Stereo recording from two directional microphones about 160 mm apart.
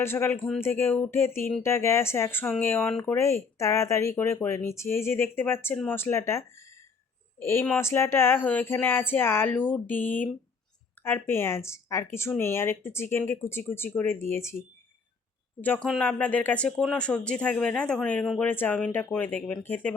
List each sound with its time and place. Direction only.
0.0 s speech: 15° left (ahead or behind)
15.6 s speech: 10° left (ahead or behind)